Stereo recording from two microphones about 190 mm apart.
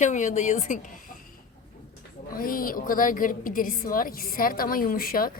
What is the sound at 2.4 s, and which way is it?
A woman's voice, 50° left (ahead or behind).